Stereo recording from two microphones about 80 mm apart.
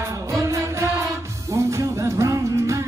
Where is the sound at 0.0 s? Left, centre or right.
Right.